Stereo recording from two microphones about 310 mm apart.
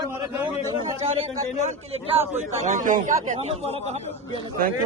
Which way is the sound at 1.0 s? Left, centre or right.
Right.